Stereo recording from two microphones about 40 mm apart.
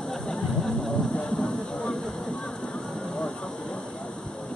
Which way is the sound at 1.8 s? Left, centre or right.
Centre.